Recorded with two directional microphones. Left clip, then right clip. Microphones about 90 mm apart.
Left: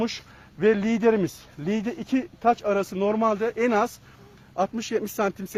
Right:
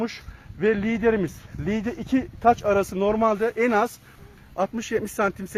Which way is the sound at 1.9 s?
25° right (ahead or behind).